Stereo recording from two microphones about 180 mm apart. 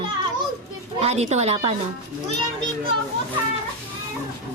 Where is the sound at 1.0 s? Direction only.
35° right (ahead or behind).